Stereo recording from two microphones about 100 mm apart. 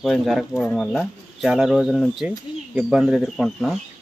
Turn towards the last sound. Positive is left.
turn(degrees=0)  # may be behind; listen again after turning